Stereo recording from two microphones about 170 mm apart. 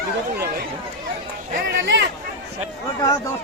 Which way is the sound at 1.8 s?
90° right.